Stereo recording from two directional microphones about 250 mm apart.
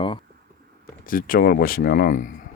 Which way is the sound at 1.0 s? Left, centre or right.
Left.